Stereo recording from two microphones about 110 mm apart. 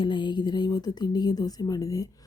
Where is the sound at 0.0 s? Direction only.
45° left (ahead or behind).